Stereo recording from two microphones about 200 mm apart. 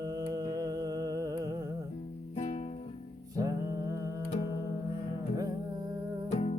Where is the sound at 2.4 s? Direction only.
35° left (ahead or behind).